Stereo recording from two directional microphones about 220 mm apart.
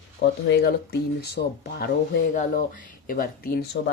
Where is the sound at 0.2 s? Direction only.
50° left (ahead or behind).